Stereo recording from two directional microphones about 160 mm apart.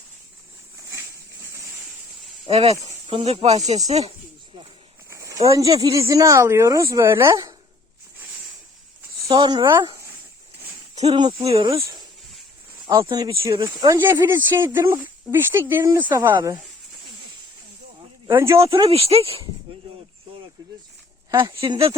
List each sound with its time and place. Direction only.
2.5 s speech: 40° right (ahead or behind)
5.0 s a sound: 20° right (ahead or behind)
5.5 s speech: 20° right (ahead or behind)
9.2 s speech: 25° right (ahead or behind)
10.9 s speech: 40° right (ahead or behind)
11.2 s speech: 30° right (ahead or behind)
11.7 s speech: 20° right (ahead or behind)
13.9 s speech: 15° right (ahead or behind)
16.1 s speech: 25° right (ahead or behind)
18.3 s speech: 15° right (ahead or behind)
18.7 s speech: 35° right (ahead or behind)
21.2 s speech: 25° right (ahead or behind)